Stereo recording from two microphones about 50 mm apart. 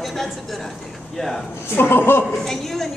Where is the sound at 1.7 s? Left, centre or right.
Left.